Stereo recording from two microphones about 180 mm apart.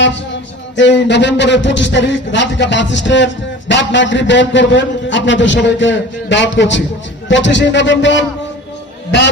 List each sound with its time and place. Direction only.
0.8 s a man's voice: 80° left